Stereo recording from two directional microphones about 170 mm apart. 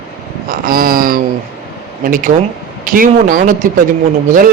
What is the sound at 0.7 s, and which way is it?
A man's voice, 60° right (ahead or behind).